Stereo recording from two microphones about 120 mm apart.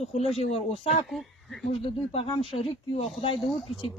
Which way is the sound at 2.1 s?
50° left (ahead or behind).